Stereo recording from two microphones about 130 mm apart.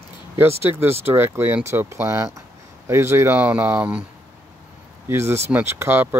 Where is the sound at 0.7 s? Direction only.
15° right (ahead or behind).